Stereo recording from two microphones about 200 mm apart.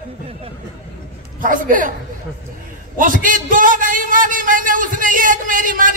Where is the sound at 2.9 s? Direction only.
40° right (ahead or behind).